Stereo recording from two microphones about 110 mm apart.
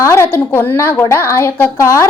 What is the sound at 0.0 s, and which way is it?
A woman's voice, 25° left (ahead or behind).